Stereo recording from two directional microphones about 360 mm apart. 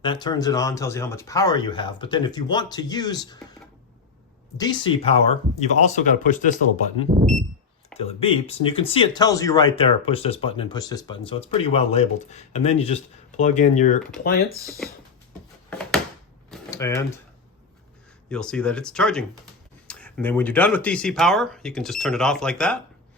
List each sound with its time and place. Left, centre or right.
0.0 s speech: centre
4.5 s speech: centre
7.1 s speech: centre
7.9 s speech: centre
15.7 s a sound: centre
16.5 s typewriter: centre
18.3 s speech: centre